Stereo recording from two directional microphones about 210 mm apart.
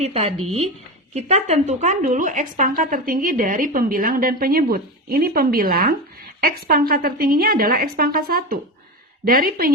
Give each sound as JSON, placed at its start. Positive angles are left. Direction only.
{"t": 0.0, "sound": "a woman's voice", "side_deg": -30}